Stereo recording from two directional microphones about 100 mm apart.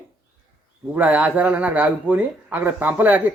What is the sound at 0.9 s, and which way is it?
Speech, 15° right (ahead or behind).